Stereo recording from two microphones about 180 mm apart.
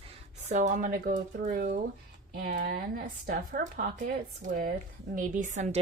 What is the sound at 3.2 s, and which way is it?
A woman's voice, 55° right (ahead or behind).